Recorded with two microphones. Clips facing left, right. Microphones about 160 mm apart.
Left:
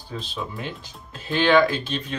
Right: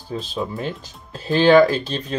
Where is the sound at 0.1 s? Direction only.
40° right (ahead or behind).